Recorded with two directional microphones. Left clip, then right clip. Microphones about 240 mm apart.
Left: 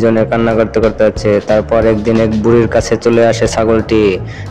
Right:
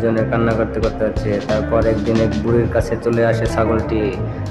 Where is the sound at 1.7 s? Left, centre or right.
Left.